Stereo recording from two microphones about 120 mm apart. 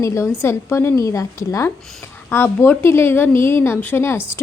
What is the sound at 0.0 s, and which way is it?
A woman's voice, 25° left (ahead or behind).